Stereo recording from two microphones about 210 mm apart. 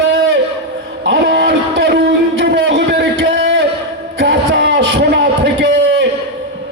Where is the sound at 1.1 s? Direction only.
50° right (ahead or behind).